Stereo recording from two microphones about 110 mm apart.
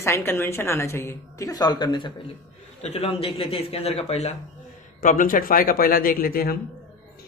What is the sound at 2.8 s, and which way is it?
Speech, 65° left (ahead or behind).